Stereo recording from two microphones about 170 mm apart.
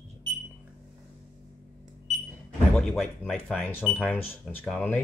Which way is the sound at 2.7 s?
Centre (ahead or behind).